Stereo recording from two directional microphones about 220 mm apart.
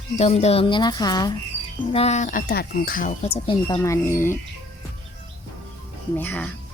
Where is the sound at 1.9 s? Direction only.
30° left (ahead or behind); by 4.4 s 10° left (ahead or behind).